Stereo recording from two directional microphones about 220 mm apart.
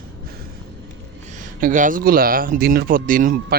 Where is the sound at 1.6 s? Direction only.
40° right (ahead or behind).